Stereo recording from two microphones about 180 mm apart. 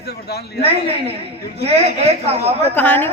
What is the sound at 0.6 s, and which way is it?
A man's voice, 30° right (ahead or behind).